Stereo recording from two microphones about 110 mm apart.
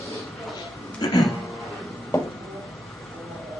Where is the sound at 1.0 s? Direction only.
35° left (ahead or behind).